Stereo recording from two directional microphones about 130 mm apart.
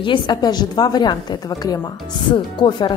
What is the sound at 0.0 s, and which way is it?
Speech, 35° left (ahead or behind).